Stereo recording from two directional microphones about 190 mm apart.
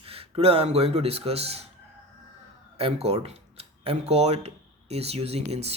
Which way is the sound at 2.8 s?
30° right (ahead or behind).